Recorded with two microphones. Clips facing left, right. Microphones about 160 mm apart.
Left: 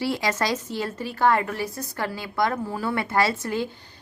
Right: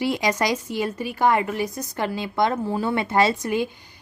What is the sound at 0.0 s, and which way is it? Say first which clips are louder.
Speech: right 3 dB; 15° right (ahead or behind).